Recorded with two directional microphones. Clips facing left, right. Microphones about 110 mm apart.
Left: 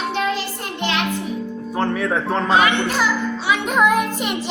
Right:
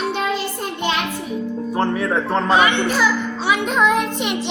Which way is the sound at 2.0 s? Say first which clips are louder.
Right 1 dB; centre (ahead or behind).